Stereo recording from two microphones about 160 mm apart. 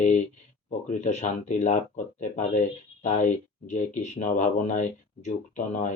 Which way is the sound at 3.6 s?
50° left (ahead or behind).